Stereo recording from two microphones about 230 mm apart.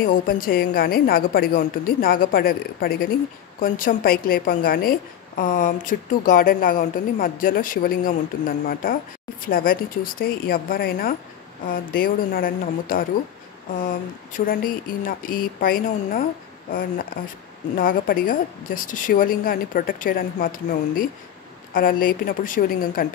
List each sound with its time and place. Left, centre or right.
0.0 s a woman's voice: left
17.7 s a woman's voice: left